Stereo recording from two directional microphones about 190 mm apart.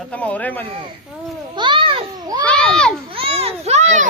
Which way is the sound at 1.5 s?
25° right (ahead or behind).